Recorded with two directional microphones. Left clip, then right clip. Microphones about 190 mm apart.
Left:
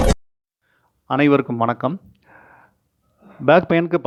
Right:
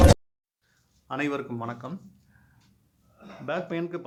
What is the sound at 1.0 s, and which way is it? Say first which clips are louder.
Speech: left 13 dB; 45° left (ahead or behind).